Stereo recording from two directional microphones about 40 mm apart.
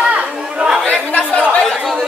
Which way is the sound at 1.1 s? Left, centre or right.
Left.